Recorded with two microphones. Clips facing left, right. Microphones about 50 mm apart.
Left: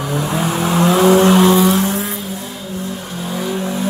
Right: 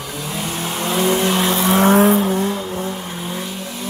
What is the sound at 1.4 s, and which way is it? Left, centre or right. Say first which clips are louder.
Vehicle: left 6 dB; centre.